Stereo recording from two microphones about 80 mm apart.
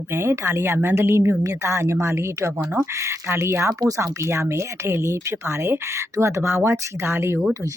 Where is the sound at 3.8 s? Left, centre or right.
Right.